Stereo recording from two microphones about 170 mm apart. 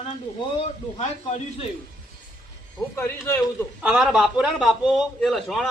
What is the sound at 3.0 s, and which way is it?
Speech, 15° left (ahead or behind).